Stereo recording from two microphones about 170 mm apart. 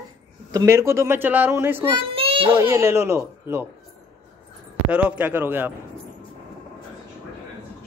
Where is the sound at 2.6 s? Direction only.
15° right (ahead or behind).